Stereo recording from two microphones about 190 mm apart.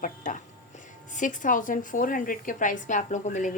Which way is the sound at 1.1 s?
40° left (ahead or behind).